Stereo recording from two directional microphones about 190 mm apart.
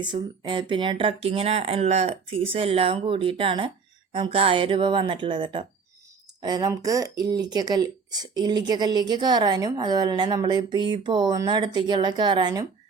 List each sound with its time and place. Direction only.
0.0 s speech: 25° right (ahead or behind)